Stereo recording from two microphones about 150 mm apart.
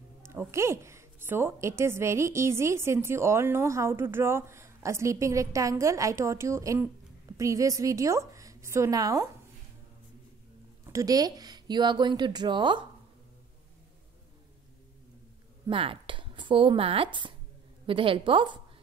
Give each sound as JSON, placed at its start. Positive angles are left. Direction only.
{"t": 0.2, "sound": "a woman's voice", "side_deg": -15}
{"t": 10.9, "sound": "a woman's voice", "side_deg": -25}
{"t": 15.6, "sound": "a woman's voice", "side_deg": -35}